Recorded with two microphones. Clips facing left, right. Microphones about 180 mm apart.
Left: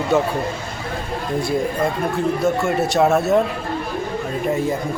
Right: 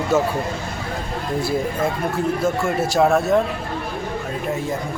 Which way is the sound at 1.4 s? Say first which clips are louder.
Left 1 dB; centre (ahead or behind).